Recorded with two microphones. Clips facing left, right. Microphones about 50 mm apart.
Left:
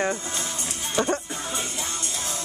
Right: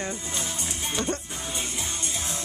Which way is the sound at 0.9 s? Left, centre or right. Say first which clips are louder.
Left 6 dB; left.